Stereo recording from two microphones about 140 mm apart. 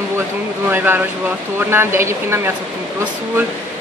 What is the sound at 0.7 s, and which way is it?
Speech, 15° right (ahead or behind).